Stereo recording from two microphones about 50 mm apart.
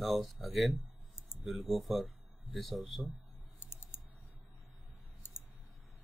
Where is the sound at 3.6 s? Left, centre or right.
Left.